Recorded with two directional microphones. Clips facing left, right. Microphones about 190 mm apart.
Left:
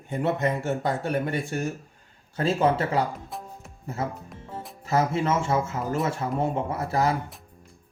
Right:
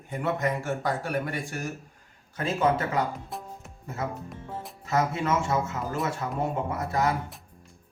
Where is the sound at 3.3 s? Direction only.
Centre (ahead or behind).